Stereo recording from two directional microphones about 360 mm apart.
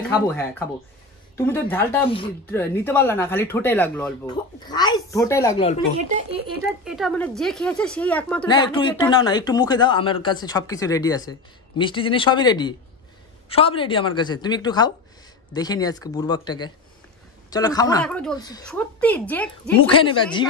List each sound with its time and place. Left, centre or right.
0.3 s a woman's voice: centre
6.8 s a woman's voice: centre